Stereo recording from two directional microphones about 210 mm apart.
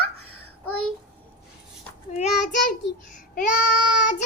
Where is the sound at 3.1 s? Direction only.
35° left (ahead or behind).